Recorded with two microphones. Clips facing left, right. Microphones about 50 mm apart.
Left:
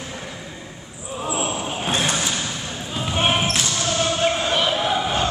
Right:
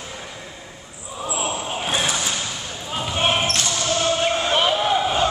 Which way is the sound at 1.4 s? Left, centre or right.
Centre.